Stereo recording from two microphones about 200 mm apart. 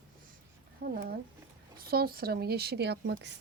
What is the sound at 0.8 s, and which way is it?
Speech, 50° right (ahead or behind).